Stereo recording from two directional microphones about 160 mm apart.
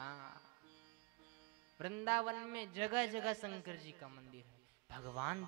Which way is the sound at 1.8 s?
15° right (ahead or behind).